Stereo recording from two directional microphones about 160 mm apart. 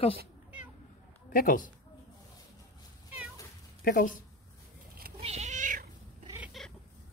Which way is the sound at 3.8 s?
65° left (ahead or behind).